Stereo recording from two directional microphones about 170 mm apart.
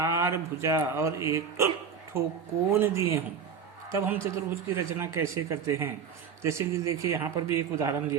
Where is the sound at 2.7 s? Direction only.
15° right (ahead or behind).